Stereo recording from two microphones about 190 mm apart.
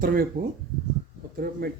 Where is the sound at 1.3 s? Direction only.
55° right (ahead or behind).